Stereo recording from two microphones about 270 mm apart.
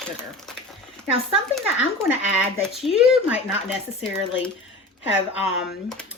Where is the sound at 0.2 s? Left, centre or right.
Centre.